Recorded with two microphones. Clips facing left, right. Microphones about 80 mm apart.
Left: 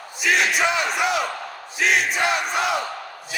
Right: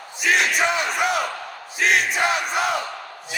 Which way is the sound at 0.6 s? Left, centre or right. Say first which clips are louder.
Even; right.